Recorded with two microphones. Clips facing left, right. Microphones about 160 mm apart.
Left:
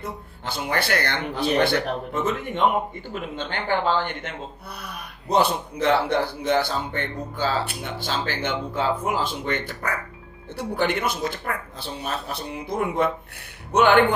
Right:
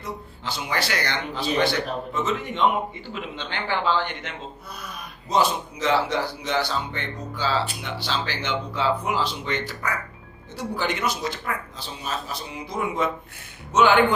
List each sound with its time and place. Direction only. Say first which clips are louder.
0.0 s speech: even; 55° left (ahead or behind)